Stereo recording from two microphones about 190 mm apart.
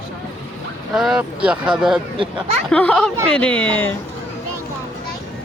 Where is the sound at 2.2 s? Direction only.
30° right (ahead or behind).